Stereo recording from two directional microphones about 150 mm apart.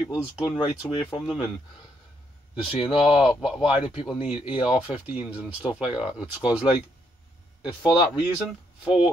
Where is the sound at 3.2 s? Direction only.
5° right (ahead or behind).